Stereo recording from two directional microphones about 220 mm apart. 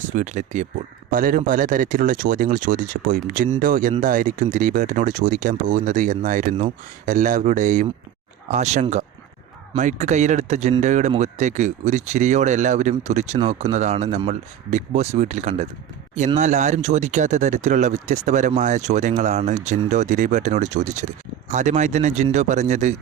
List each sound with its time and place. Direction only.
0.2 s speech: 35° right (ahead or behind)